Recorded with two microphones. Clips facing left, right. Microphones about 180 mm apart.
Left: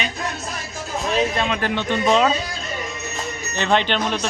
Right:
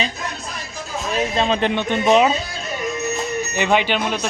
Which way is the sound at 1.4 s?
30° right (ahead or behind).